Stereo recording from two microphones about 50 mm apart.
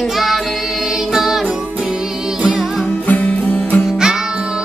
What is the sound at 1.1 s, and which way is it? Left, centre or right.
Music, centre.